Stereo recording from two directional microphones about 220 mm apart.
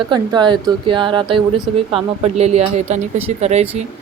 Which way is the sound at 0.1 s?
20° right (ahead or behind).